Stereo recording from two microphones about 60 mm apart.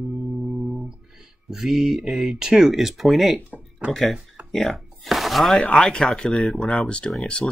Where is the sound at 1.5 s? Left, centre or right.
Centre.